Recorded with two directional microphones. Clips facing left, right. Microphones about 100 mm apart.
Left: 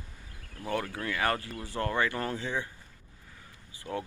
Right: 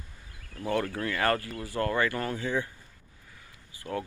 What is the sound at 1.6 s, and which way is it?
Speech, 25° left (ahead or behind).